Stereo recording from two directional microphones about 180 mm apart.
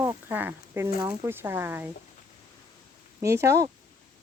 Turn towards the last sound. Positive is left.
turn(degrees=-15)  # may be behind; listen again after turning